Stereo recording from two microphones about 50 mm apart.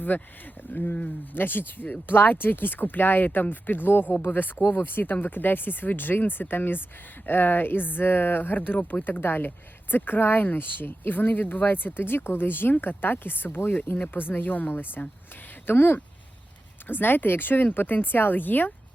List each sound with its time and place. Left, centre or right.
0.1 s speech: left
1.3 s speech: left